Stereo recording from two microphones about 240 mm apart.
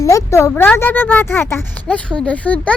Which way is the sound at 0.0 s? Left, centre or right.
Centre.